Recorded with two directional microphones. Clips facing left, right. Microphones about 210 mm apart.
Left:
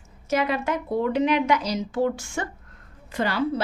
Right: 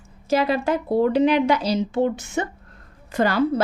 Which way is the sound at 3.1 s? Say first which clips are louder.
Right 5 dB; 45° right (ahead or behind).